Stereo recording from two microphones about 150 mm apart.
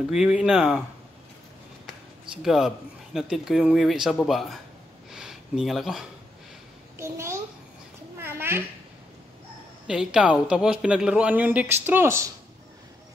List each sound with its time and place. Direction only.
0.1 s speech: 5° right (ahead or behind)
2.4 s speech: centre (ahead or behind)
5.1 s a sound: 5° right (ahead or behind)
7.0 s a man's voice: 20° right (ahead or behind)
8.2 s a sound: 15° right (ahead or behind)
9.8 s a man's voice: 5° right (ahead or behind)